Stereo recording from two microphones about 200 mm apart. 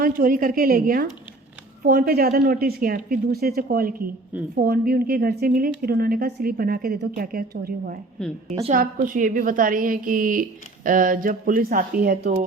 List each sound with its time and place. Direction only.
0.0 s speech: 45° right (ahead or behind)
8.2 s a woman's voice: 5° left (ahead or behind)
8.7 s speech: 45° right (ahead or behind)